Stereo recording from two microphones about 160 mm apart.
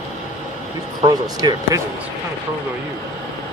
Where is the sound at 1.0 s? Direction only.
25° right (ahead or behind).